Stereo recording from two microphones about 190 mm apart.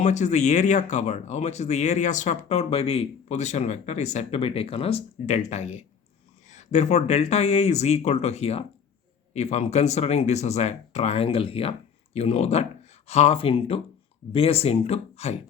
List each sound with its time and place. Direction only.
0.0 s speech: 40° left (ahead or behind)